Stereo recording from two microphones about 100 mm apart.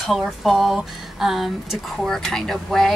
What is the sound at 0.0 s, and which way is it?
Speech, centre (ahead or behind).